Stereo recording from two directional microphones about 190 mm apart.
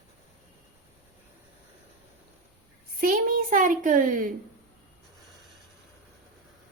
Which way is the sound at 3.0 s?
45° right (ahead or behind).